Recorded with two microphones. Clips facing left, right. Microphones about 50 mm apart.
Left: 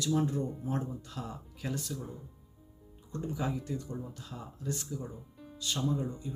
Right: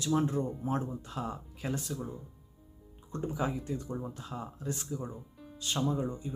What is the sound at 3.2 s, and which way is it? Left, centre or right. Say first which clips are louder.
Speech: right 2 dB; right.